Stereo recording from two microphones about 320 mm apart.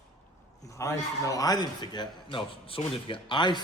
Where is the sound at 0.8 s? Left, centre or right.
Centre.